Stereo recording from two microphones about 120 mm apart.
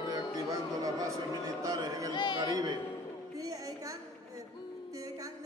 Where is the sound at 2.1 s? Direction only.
40° left (ahead or behind).